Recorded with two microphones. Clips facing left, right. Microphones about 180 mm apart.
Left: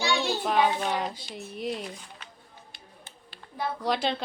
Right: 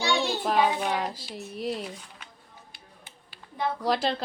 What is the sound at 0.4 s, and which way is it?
A woman's voice, centre (ahead or behind).